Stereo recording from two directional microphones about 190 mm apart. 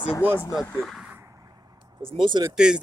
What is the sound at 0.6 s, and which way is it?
Speech, 5° left (ahead or behind).